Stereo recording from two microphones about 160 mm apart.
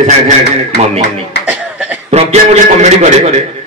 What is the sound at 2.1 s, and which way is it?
A man's voice, 45° right (ahead or behind).